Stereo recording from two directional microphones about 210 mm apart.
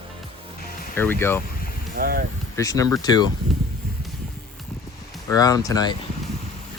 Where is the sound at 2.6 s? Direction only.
15° left (ahead or behind).